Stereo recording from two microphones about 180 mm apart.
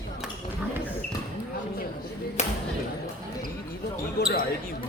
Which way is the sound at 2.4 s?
40° left (ahead or behind).